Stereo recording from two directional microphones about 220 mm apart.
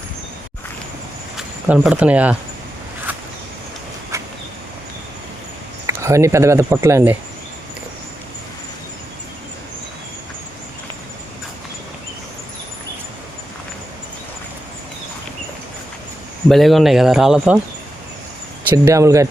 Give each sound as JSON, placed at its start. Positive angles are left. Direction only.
{"t": 1.4, "sound": "speech", "side_deg": -5}
{"t": 4.1, "sound": "vehicle", "side_deg": -15}
{"t": 5.8, "sound": "speech", "side_deg": -15}
{"t": 16.5, "sound": "speech", "side_deg": 0}
{"t": 18.9, "sound": "speech", "side_deg": -15}